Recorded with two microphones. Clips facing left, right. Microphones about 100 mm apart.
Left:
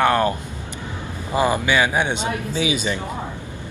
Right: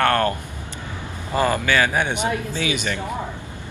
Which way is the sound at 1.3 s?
15° left (ahead or behind).